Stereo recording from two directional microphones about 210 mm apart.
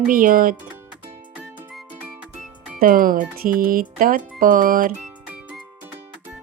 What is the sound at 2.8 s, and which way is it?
Speech, 40° right (ahead or behind).